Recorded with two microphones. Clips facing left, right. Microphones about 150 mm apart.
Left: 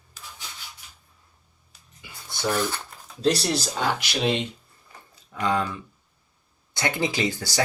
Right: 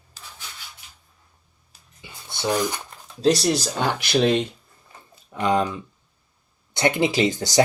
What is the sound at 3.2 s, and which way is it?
Speech, 40° right (ahead or behind).